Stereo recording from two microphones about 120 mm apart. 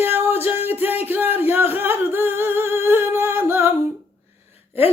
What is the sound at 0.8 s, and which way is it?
Singing, 15° right (ahead or behind).